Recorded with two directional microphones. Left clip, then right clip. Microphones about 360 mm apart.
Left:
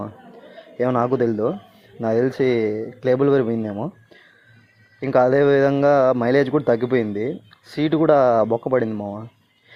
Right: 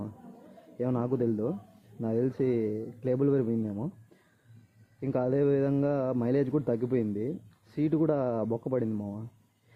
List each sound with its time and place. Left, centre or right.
0.8 s speech: centre
2.4 s speech: left
3.0 s speech: centre
5.0 s speech: centre